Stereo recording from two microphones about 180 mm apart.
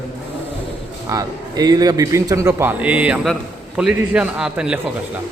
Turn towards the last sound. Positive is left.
turn(degrees=-5)  # may be behind; listen again after turning